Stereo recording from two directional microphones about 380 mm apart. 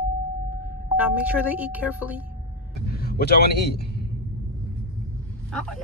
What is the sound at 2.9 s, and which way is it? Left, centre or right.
Speech, left.